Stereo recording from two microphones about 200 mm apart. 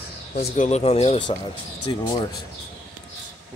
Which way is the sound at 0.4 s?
50° left (ahead or behind).